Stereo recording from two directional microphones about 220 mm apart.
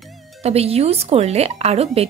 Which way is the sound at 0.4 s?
30° right (ahead or behind).